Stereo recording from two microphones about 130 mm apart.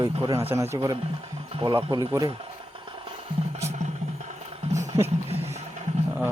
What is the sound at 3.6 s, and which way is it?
Music, 60° right (ahead or behind).